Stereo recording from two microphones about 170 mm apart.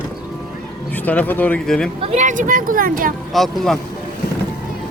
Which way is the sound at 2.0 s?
45° right (ahead or behind).